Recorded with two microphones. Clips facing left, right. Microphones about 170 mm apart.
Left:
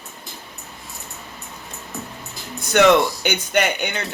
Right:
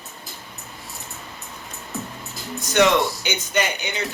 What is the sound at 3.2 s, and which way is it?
Speech, 60° left (ahead or behind).